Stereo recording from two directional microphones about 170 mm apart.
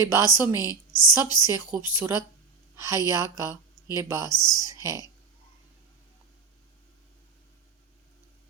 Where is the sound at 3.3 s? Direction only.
15° right (ahead or behind).